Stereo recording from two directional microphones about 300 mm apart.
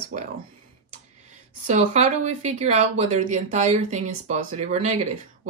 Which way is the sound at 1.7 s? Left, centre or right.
Right.